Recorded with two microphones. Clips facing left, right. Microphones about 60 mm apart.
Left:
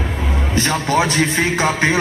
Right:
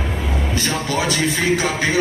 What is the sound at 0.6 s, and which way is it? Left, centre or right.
A man's voice, left.